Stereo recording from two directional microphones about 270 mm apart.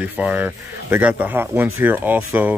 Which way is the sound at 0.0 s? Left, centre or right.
Centre.